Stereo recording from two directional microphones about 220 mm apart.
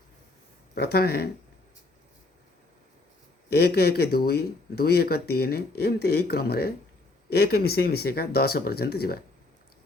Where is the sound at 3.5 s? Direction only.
45° left (ahead or behind).